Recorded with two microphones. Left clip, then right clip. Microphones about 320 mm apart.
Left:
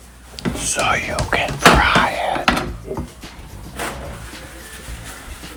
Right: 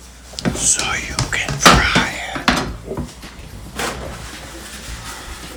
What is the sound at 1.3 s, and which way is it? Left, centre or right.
Music, centre.